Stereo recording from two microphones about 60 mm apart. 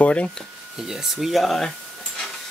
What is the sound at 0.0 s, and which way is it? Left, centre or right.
Speech, centre.